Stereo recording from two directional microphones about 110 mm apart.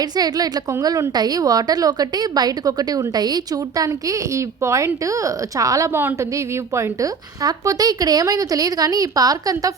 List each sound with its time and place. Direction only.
0.0 s a woman's voice: 35° right (ahead or behind)